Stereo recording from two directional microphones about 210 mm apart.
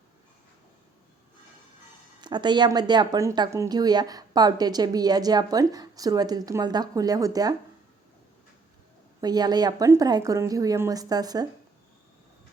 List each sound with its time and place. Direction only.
2.2 s speech: 20° right (ahead or behind)
9.2 s a woman's voice: 20° right (ahead or behind)